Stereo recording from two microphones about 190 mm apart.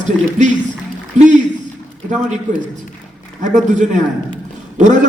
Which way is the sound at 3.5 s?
40° right (ahead or behind).